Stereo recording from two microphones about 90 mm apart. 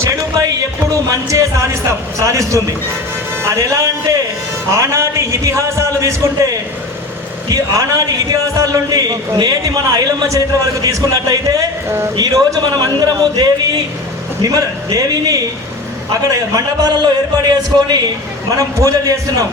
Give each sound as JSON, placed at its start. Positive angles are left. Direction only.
{"t": 0.3, "sound": "a man's voice", "side_deg": -40}
{"t": 17.0, "sound": "a man's voice", "side_deg": -50}
{"t": 18.5, "sound": "a man's voice", "side_deg": -40}